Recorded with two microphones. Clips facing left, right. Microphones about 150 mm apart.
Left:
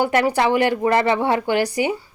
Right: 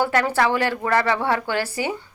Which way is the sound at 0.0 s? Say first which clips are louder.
Left 2 dB; 15° left (ahead or behind).